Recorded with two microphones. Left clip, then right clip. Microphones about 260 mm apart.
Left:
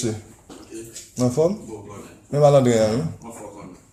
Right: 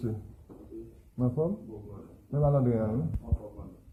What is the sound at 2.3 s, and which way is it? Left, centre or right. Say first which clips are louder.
Speech: left 13 dB; left.